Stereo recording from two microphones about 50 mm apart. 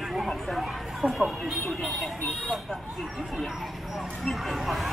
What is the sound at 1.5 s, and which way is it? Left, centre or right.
Speech, centre.